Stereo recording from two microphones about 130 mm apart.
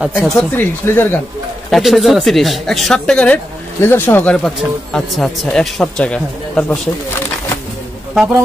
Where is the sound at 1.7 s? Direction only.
Centre (ahead or behind).